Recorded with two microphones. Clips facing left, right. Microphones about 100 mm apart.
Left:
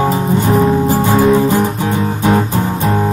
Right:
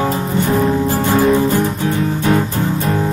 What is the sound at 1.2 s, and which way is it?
Music, 5° left (ahead or behind).